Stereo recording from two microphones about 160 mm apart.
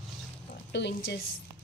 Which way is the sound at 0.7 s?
90° left.